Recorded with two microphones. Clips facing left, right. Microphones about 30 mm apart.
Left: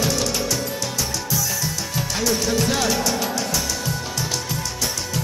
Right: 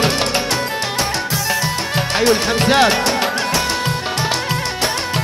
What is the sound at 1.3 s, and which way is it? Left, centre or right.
Music, right.